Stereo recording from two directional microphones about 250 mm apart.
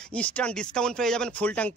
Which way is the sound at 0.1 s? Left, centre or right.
Centre.